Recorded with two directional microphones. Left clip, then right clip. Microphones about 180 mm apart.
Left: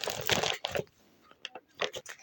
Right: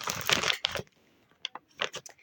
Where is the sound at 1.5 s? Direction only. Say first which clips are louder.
Even; 15° right (ahead or behind).